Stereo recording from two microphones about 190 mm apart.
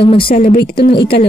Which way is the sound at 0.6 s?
55° left (ahead or behind).